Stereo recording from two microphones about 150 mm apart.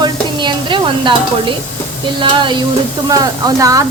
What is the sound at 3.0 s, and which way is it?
Stir, 25° right (ahead or behind).